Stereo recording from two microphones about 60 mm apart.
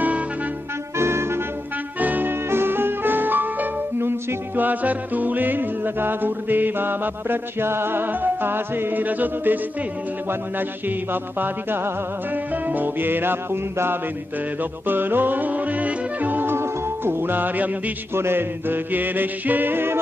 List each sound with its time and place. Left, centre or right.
0.9 s music: right
2.0 s music: right
10.9 s music: right
18.1 s music: right